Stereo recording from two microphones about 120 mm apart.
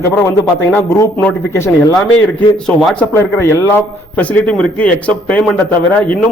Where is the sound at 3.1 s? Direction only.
20° left (ahead or behind).